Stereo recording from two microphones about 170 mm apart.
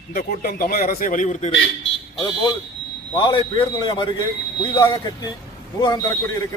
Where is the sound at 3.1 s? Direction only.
25° left (ahead or behind).